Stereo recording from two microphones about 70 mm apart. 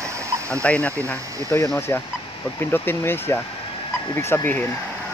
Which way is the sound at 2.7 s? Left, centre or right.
Left.